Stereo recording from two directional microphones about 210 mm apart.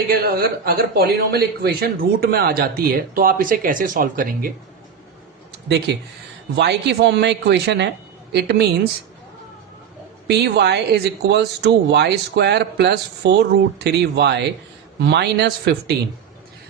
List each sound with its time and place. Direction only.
0.1 s speech: 45° right (ahead or behind)
6.6 s speech: 55° right (ahead or behind)
10.2 s speech: 50° right (ahead or behind)